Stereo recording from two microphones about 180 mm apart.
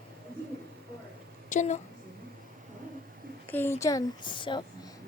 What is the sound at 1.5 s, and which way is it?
Speech, 40° left (ahead or behind).